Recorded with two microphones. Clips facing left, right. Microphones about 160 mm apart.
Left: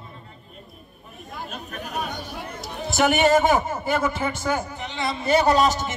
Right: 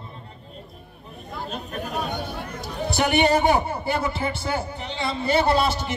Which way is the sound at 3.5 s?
35° right (ahead or behind).